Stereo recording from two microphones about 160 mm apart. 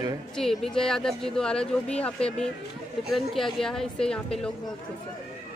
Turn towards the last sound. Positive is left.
turn(degrees=5)  # may be behind; listen again after turning